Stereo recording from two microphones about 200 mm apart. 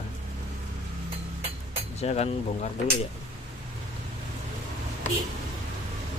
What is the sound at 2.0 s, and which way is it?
Speech, 30° left (ahead or behind).